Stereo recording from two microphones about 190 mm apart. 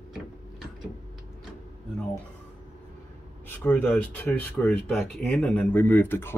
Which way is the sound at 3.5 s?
10° left (ahead or behind).